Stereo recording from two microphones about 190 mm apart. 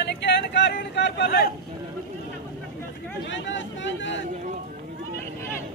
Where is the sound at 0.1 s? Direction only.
65° left (ahead or behind).